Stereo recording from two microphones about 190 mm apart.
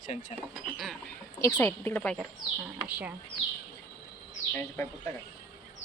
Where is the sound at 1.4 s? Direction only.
15° left (ahead or behind).